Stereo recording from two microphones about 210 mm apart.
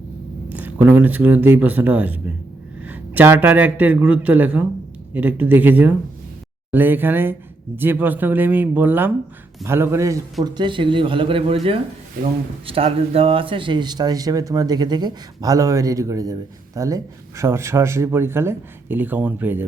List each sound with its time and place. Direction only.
0.5 s speech: 10° right (ahead or behind)